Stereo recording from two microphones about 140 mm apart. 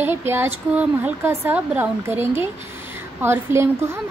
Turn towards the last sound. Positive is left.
turn(degrees=-15)  # may be behind; listen again after turning